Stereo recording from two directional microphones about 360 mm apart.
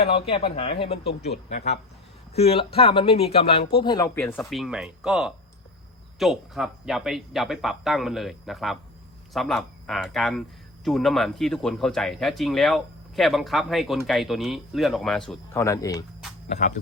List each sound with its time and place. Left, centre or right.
0.1 s speech: centre
1.0 s speech: left; by 16.0 s centre
16.5 s speech: centre